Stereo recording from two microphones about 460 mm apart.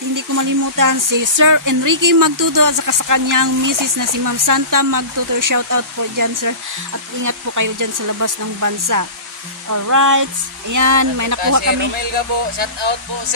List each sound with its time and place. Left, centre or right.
0.1 s speech: right